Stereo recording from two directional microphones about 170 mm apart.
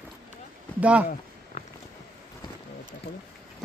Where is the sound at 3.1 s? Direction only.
90° left.